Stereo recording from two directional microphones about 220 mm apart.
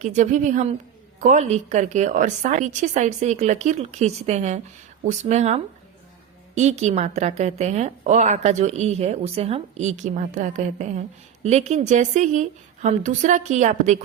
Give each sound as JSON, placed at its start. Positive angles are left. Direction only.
{"t": 0.0, "sound": "a woman's voice", "side_deg": -35}